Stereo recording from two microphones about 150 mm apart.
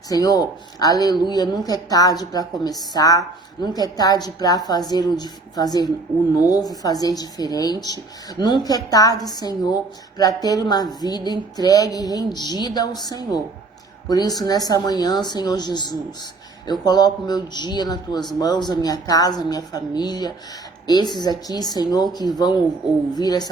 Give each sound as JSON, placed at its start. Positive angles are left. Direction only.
{"t": 0.1, "sound": "a woman's voice", "side_deg": 25}